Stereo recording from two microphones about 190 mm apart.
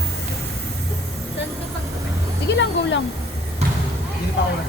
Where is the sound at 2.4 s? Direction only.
70° left (ahead or behind).